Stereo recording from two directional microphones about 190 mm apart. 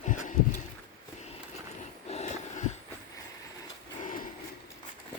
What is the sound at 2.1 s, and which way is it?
Wheeze, 35° left (ahead or behind).